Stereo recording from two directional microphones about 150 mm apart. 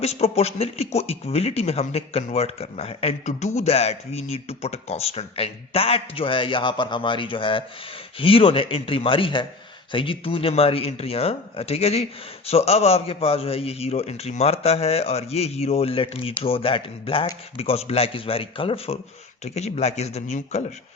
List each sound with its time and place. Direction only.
0.0 s a man's voice: 45° left (ahead or behind)